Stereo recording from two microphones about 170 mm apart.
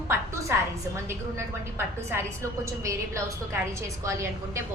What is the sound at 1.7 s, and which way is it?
Speech, 15° right (ahead or behind).